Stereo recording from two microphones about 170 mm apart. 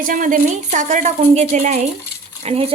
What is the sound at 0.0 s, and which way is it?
A woman's voice, 50° right (ahead or behind).